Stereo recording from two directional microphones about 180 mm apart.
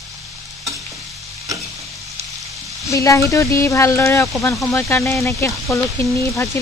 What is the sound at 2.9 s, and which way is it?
Speech, 15° left (ahead or behind).